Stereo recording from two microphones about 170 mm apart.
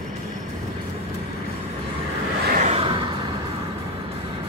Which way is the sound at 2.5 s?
45° right (ahead or behind).